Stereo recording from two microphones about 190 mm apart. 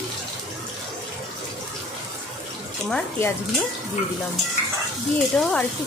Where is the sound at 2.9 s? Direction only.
15° left (ahead or behind).